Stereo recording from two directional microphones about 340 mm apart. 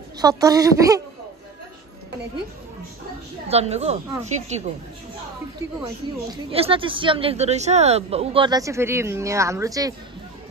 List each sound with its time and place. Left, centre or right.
0.2 s speech: centre
3.4 s a woman's voice: centre
6.3 s speech: centre